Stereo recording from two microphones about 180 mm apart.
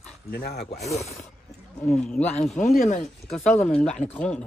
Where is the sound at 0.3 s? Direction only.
60° left (ahead or behind).